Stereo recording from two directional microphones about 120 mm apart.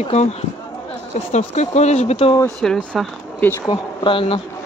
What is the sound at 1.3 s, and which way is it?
Speech, 70° left (ahead or behind).